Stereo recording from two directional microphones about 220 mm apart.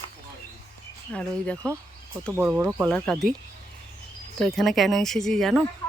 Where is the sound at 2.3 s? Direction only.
5° right (ahead or behind).